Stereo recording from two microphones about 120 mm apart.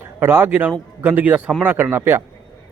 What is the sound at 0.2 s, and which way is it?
A man's voice, 20° right (ahead or behind).